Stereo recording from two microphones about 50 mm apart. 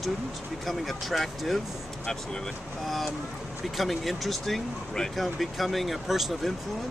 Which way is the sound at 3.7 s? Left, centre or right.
Centre.